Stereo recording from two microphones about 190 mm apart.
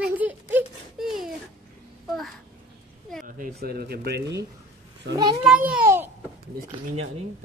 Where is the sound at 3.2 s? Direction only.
50° right (ahead or behind); by 5.2 s 65° right (ahead or behind).